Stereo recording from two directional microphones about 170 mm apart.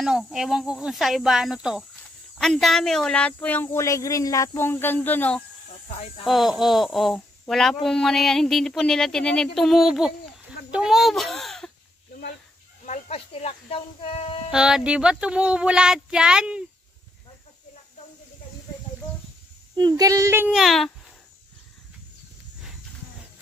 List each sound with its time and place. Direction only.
0.0 s speech: centre (ahead or behind)
6.2 s speech: centre (ahead or behind)
10.7 s a sound: 5° right (ahead or behind)
12.8 s speech: 40° left (ahead or behind)
14.5 s speech: 5° right (ahead or behind)
19.7 s speech: 25° right (ahead or behind); by 20.9 s centre (ahead or behind)